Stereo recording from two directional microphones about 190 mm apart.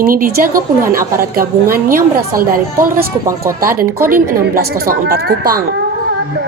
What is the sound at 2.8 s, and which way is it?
Speech, 15° right (ahead or behind).